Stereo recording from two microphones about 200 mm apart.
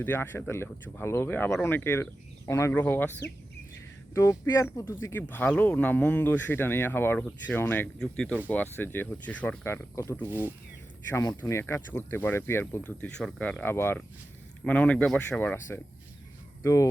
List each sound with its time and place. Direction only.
0.0 s speech: 10° left (ahead or behind)
4.1 s speech: 15° left (ahead or behind)
10.2 s speech: 10° right (ahead or behind)
11.1 s speech: 15° left (ahead or behind)
16.6 s speech: 15° left (ahead or behind)